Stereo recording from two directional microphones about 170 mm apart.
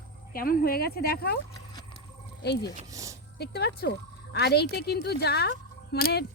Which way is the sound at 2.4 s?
75° left (ahead or behind).